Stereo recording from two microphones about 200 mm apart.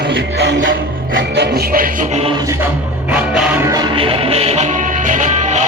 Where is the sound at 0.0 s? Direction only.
60° right (ahead or behind); by 2.3 s 35° right (ahead or behind).